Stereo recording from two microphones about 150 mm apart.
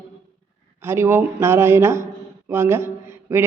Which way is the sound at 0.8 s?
15° right (ahead or behind).